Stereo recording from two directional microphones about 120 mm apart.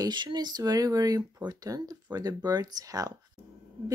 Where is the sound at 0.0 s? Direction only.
40° right (ahead or behind).